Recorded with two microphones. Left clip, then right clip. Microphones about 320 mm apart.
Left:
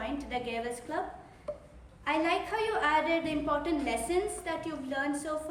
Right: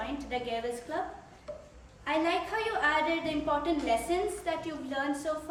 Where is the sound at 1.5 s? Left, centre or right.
Centre.